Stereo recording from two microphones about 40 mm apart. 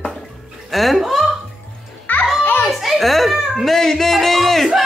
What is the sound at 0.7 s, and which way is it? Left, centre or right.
Speech, centre.